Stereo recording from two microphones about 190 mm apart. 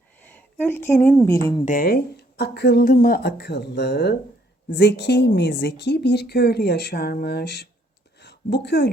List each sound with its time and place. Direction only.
0.2 s a sound: 10° left (ahead or behind)
1.3 s speech: 15° left (ahead or behind)
1.6 s a woman's voice: 45° left (ahead or behind); by 8.9 s 65° left (ahead or behind)